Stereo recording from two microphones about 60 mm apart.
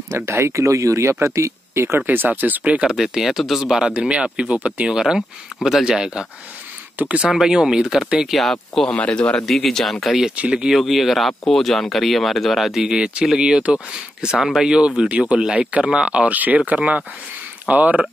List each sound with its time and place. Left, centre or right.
0.1 s speech: right
2.0 s speech: right
2.9 s speech: centre; by 4.8 s right
4.8 s speech: centre
7.0 s speech: right
7.2 s speech: centre
8.3 s speech: centre
8.9 s a man's voice: left
9.5 s speech: centre
10.3 s speech: centre
10.7 s speech: centre; by 18.0 s right